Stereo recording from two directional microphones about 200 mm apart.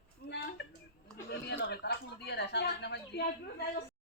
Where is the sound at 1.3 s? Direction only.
60° left (ahead or behind).